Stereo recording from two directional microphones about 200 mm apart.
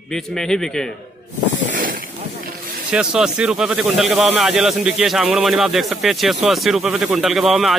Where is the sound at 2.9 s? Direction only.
5° right (ahead or behind).